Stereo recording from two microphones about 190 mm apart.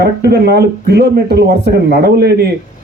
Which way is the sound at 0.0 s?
60° right (ahead or behind).